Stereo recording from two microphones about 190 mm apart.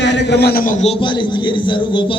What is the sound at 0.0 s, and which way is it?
Speech, 70° left (ahead or behind).